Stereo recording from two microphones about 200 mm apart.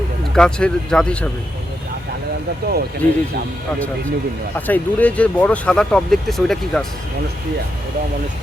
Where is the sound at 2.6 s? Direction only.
50° right (ahead or behind).